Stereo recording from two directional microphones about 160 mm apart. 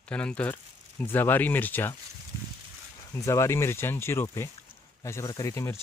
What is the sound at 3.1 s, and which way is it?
Speech, 20° left (ahead or behind).